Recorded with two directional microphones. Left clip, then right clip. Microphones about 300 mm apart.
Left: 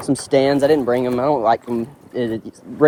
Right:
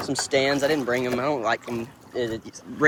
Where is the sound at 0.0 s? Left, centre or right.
Left.